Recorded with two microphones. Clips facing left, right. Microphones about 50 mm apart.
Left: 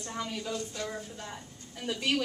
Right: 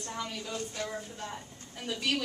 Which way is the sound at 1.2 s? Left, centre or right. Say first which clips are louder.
Right 2 dB; centre.